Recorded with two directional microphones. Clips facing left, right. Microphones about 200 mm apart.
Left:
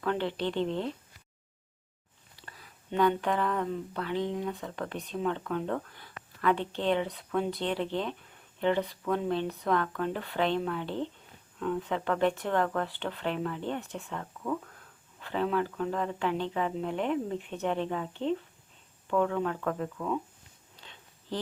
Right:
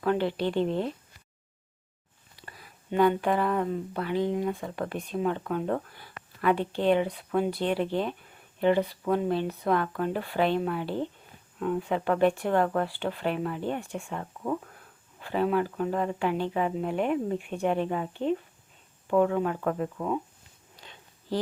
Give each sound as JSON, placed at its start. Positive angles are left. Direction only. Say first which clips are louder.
{"t": 0.0, "sound": "speech", "louder": "right 4 dB", "side_deg": -10}
{"t": 2.3, "sound": "speech", "louder": "right 3 dB", "side_deg": -10}
{"t": 20.7, "sound": "a sound", "louder": "right 3 dB", "side_deg": -10}